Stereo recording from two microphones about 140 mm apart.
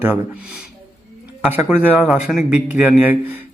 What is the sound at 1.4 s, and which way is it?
Speech, 15° right (ahead or behind).